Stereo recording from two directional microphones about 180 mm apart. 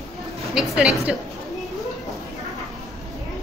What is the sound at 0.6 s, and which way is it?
Speech, 5° right (ahead or behind).